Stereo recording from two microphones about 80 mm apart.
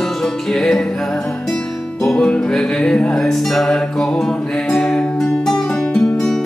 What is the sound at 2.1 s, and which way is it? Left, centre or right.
Music, centre.